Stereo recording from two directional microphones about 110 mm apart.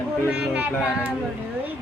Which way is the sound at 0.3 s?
10° right (ahead or behind).